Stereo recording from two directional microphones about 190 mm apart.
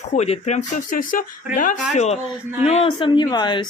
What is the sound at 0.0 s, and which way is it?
Speech, 35° left (ahead or behind).